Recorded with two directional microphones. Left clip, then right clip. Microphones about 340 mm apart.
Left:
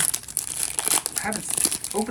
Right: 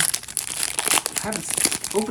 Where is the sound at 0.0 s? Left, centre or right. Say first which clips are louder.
Right 4 dB; centre.